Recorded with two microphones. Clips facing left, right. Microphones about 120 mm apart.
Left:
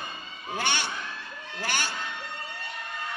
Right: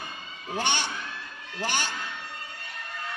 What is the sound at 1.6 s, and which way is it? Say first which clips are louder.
Music: right 2 dB; 15° right (ahead or behind).